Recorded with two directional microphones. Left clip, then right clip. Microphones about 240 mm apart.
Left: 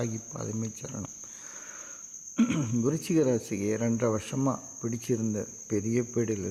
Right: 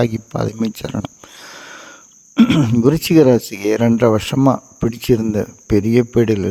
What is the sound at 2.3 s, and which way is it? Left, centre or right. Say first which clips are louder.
Speech: right 15 dB; right.